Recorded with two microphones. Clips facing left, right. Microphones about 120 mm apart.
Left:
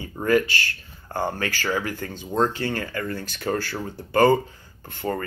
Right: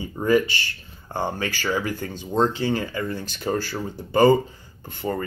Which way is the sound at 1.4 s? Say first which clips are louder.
Right 1 dB; 15° right (ahead or behind).